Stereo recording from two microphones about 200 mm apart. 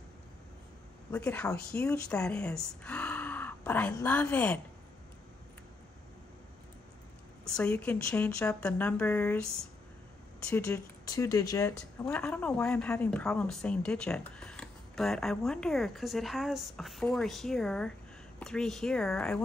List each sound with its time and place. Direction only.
1.1 s speech: 5° left (ahead or behind)
7.4 s speech: 5° left (ahead or behind)
12.0 s speech: 5° left (ahead or behind)